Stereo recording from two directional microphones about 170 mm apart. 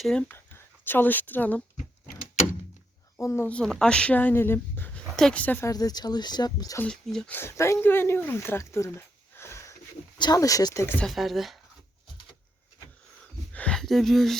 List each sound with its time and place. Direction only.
0.0 s speech: 5° left (ahead or behind)
3.2 s speech: 15° left (ahead or behind)
6.8 s speech: 5° left (ahead or behind); by 10.9 s 20° left (ahead or behind)
11.0 s speech: centre (ahead or behind)
13.5 s a sound: 5° left (ahead or behind)